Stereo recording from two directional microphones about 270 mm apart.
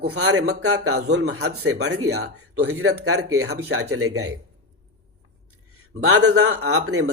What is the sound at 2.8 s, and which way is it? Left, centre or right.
Speech, right.